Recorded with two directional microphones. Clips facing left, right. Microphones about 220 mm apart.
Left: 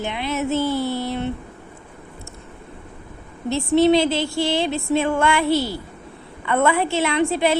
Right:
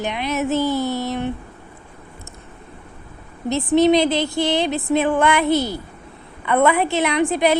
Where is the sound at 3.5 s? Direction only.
20° right (ahead or behind).